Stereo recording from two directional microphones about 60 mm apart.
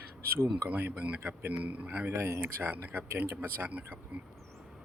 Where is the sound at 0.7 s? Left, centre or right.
Right.